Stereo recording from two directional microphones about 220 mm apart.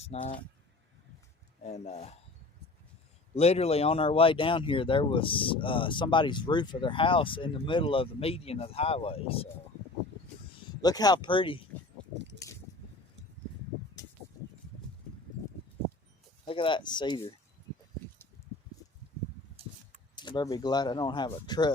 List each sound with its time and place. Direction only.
0.0 s speech: 30° left (ahead or behind)
1.6 s speech: 30° left (ahead or behind)
3.3 s speech: 30° left (ahead or behind)
10.8 s speech: 15° left (ahead or behind)
12.1 s keys jangling: 50° right (ahead or behind)
16.5 s speech: 25° left (ahead or behind)
20.1 s speech: 20° left (ahead or behind)